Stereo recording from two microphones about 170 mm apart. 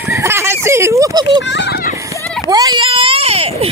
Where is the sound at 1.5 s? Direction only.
80° left.